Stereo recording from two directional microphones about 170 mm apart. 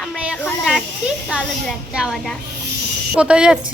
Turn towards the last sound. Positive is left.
turn(degrees=-5)  # may be behind; listen again after turning